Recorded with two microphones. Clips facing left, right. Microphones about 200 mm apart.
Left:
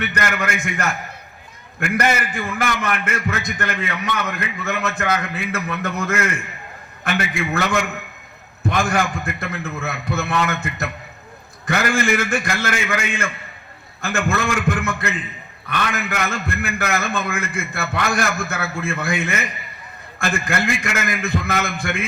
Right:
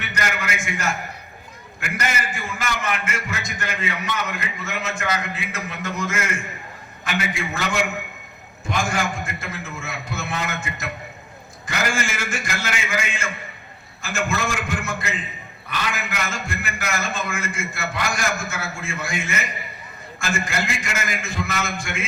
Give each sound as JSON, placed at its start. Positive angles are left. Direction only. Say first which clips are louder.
{"t": 0.0, "sound": "a man's voice", "louder": "left 4 dB", "side_deg": 60}